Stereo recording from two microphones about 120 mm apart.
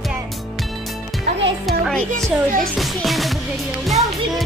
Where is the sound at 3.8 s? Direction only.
Centre (ahead or behind).